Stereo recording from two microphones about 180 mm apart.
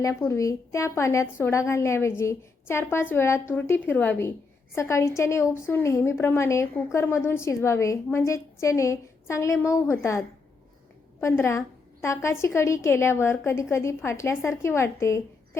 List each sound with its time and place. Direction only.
0.0 s a woman's voice: 15° left (ahead or behind)